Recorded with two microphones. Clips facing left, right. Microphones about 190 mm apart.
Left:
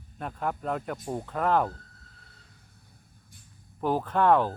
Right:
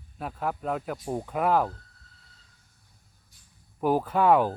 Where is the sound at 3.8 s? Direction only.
10° right (ahead or behind).